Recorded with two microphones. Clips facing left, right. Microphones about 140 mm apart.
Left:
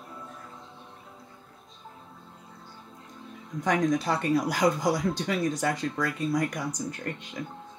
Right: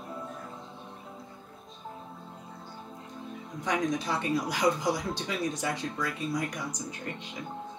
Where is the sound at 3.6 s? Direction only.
50° left (ahead or behind).